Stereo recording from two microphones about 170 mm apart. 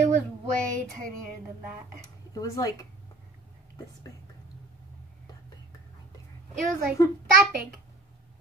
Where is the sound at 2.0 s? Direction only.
20° left (ahead or behind).